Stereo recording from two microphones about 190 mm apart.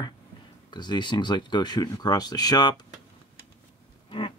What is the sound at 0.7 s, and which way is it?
Speech, 25° left (ahead or behind).